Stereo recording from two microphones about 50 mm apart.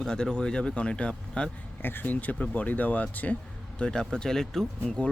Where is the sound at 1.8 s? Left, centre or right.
Left.